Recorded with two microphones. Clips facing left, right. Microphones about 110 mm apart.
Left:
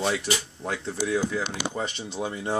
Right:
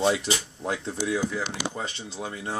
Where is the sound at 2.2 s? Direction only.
10° left (ahead or behind).